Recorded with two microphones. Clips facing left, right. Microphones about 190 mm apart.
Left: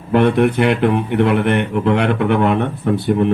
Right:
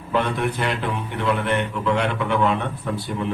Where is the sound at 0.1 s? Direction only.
60° left (ahead or behind).